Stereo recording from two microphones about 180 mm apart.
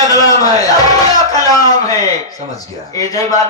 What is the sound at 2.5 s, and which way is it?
Speech, 20° left (ahead or behind).